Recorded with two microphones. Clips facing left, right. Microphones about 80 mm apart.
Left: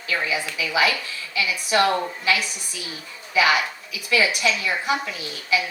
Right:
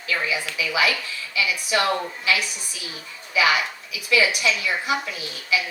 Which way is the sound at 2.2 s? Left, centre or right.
Left.